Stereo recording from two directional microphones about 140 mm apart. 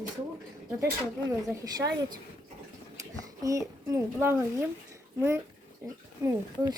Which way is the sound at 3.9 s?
20° right (ahead or behind).